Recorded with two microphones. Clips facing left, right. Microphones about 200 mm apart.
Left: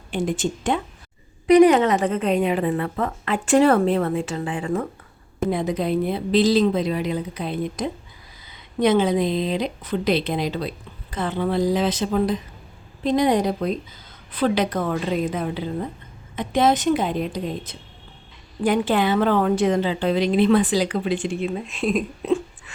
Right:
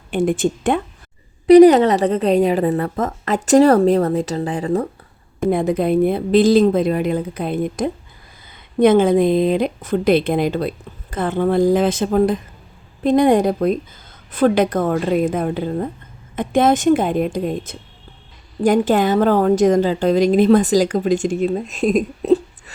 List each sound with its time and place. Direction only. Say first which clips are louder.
0.1 s speech: right 6 dB; 55° right (ahead or behind)
1.5 s a woman's voice: right 6 dB; 35° right (ahead or behind)
5.5 s a woman's voice: right 6 dB; 50° right (ahead or behind)